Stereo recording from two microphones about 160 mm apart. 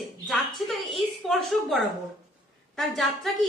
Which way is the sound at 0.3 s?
Centre (ahead or behind).